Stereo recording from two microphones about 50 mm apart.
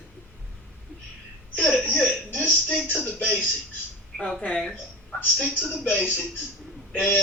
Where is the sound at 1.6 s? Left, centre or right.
Left.